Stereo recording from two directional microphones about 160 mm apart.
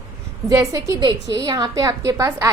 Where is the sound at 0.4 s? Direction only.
20° right (ahead or behind).